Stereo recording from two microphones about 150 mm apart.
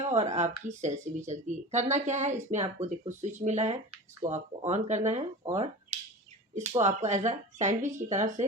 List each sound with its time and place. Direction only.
0.1 s speech: 50° right (ahead or behind)